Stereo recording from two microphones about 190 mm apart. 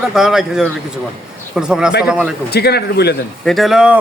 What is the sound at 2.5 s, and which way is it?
Speech, 60° left (ahead or behind).